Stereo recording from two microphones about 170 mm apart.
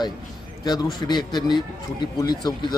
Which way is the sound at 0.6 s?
25° left (ahead or behind).